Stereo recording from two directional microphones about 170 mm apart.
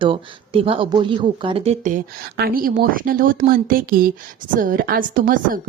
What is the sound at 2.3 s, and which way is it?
A woman's voice, 60° right (ahead or behind).